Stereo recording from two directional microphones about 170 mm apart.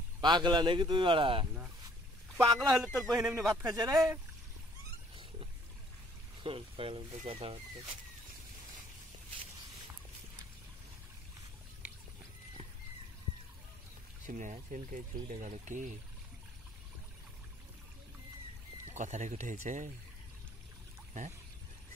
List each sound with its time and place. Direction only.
0.2 s speech: 25° right (ahead or behind)
2.3 s speech: 20° right (ahead or behind)
3.3 s a man's voice: 5° right (ahead or behind)
3.6 s speech: 20° right (ahead or behind)
6.4 s speech: 30° right (ahead or behind)
14.2 s speech: 50° right (ahead or behind)
18.9 s speech: 45° right (ahead or behind)